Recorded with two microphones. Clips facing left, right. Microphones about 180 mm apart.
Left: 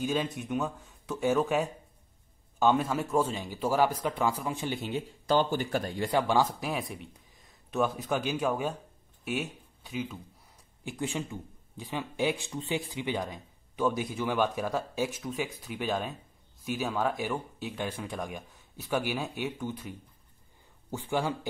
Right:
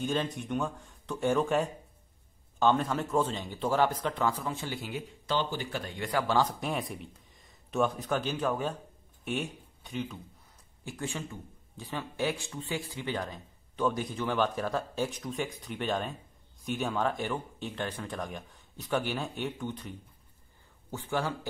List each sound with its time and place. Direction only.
0.0 s a man's voice: 10° left (ahead or behind)
5.3 s speech: 45° left (ahead or behind)
6.2 s speech: 10° left (ahead or behind)
10.8 s a man's voice: 15° left (ahead or behind)